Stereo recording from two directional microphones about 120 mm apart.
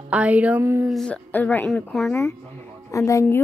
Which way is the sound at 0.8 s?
5° left (ahead or behind).